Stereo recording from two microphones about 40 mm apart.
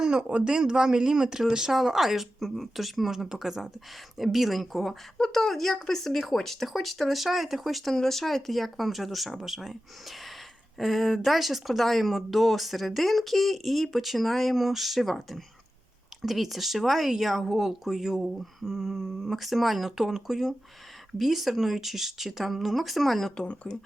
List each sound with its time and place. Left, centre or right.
0.0 s a man's voice: right
0.5 s speech: centre
5.1 s speech: centre
5.4 s speech: centre
23.7 s speech: left